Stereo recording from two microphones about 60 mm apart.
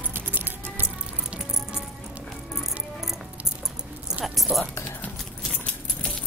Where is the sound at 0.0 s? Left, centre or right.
Right.